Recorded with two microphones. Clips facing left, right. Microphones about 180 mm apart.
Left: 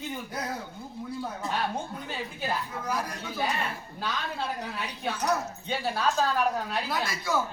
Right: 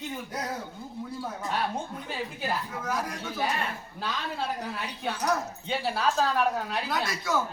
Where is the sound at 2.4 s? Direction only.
Centre (ahead or behind).